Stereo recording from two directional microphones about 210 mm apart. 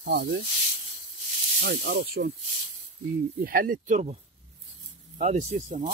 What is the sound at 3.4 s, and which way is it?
Speech, 45° right (ahead or behind).